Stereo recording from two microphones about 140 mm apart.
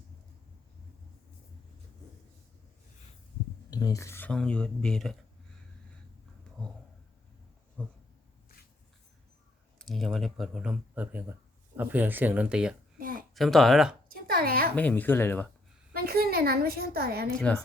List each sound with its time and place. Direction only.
3.7 s speech: 25° left (ahead or behind)
4.3 s speech: 5° left (ahead or behind)
7.8 s a sound: 10° left (ahead or behind)
9.7 s speech: centre (ahead or behind)
13.0 s a sound: 80° right
13.3 s speech: centre (ahead or behind)
14.1 s a sound: 90° right
14.8 s speech: 10° left (ahead or behind)
15.9 s a woman's voice: 90° right
17.3 s speech: 10° left (ahead or behind)